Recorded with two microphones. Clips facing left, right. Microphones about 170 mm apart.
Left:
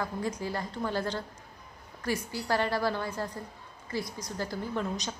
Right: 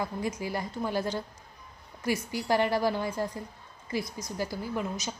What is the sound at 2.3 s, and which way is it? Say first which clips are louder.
Speech: right 4 dB; 15° right (ahead or behind).